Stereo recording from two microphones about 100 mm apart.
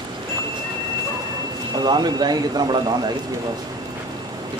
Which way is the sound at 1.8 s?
45° right (ahead or behind).